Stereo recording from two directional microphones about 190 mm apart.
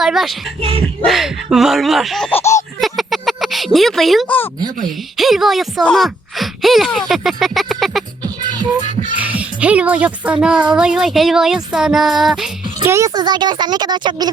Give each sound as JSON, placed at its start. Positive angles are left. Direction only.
{"t": 0.0, "sound": "speech", "side_deg": 0}
{"t": 1.0, "sound": "child singing", "side_deg": 0}
{"t": 2.8, "sound": "speech", "side_deg": 0}
{"t": 9.1, "sound": "speech", "side_deg": -10}
{"t": 10.7, "sound": "child singing", "side_deg": -5}
{"t": 12.8, "sound": "speech", "side_deg": -15}